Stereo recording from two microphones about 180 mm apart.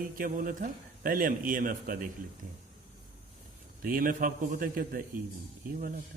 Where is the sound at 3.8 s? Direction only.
50° right (ahead or behind).